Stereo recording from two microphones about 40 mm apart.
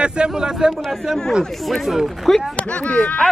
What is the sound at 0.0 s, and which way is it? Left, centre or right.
Speech, right.